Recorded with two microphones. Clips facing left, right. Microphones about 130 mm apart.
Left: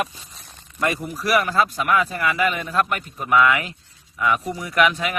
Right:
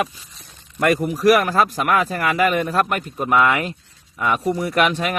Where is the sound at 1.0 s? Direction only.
45° right (ahead or behind).